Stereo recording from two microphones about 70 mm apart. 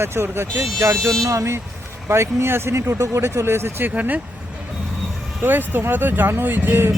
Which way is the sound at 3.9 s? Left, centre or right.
Right.